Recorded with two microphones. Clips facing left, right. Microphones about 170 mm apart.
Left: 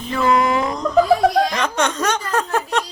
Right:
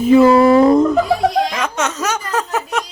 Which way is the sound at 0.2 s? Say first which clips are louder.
Right 5 dB; 30° right (ahead or behind).